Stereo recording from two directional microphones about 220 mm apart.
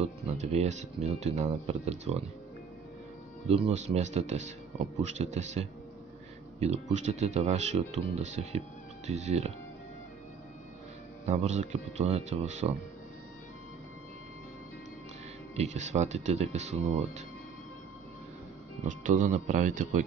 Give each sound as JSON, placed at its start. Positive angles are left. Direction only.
{"t": 0.4, "sound": "speech", "side_deg": -30}
{"t": 3.4, "sound": "speech", "side_deg": -25}
{"t": 11.2, "sound": "speech", "side_deg": -30}
{"t": 15.5, "sound": "speech", "side_deg": -30}
{"t": 18.9, "sound": "speech", "side_deg": -35}